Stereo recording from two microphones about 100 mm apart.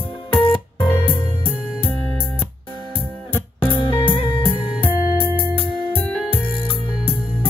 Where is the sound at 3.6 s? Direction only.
60° left (ahead or behind).